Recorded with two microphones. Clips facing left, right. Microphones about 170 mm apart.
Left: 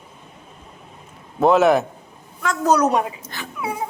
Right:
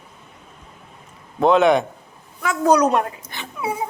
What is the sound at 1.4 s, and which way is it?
A man's voice, 5° left (ahead or behind).